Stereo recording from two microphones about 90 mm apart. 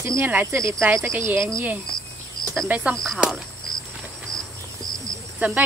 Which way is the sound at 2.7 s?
10° right (ahead or behind).